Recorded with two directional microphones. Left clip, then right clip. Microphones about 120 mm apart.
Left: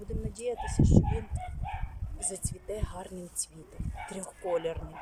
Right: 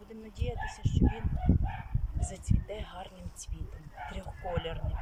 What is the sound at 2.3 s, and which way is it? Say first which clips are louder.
Speech: left 2 dB; 40° left (ahead or behind).